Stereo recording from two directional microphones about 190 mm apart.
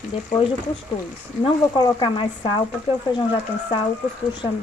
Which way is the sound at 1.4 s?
25° left (ahead or behind).